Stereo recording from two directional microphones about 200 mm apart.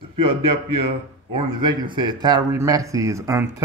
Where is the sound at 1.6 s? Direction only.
25° right (ahead or behind).